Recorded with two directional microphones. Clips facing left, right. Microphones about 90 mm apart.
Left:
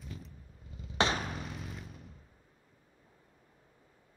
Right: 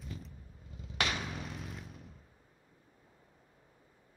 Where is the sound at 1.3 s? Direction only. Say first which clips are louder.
Left 1 dB; centre (ahead or behind).